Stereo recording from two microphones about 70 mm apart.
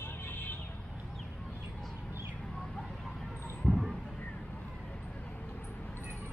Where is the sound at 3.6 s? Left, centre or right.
Centre.